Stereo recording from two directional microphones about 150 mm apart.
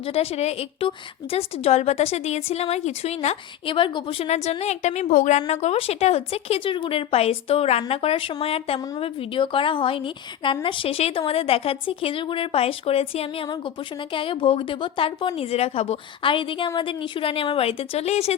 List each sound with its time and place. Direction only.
0.0 s a woman's voice: 40° left (ahead or behind)
5.5 s speech: 45° left (ahead or behind)